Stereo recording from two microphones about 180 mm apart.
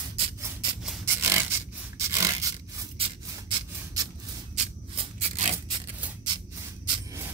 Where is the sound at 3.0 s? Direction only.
25° right (ahead or behind).